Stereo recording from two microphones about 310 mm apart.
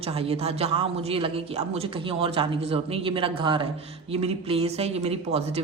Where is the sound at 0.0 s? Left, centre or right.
Centre.